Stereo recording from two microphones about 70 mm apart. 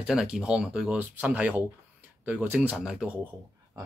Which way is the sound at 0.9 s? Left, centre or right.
Right.